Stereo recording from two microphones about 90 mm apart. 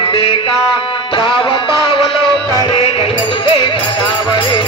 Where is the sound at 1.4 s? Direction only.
70° left (ahead or behind).